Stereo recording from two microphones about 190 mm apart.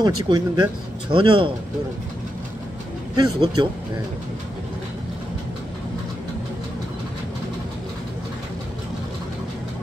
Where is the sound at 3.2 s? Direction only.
25° right (ahead or behind).